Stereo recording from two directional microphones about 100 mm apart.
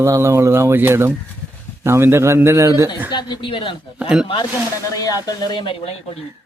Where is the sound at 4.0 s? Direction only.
5° right (ahead or behind).